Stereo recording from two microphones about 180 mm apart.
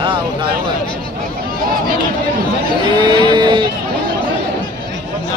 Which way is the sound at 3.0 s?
25° right (ahead or behind).